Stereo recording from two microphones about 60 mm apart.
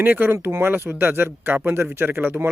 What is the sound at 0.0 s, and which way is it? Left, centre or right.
Speech, right.